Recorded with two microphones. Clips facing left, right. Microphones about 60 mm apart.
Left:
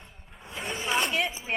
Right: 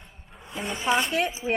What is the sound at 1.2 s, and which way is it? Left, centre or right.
Speech, right.